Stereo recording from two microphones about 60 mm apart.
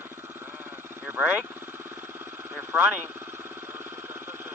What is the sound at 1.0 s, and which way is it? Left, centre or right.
Speech, right.